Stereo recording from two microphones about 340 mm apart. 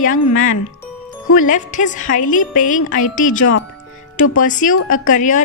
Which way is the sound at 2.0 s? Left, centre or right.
Left.